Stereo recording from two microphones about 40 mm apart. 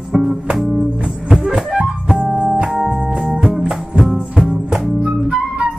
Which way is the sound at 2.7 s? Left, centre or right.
Centre.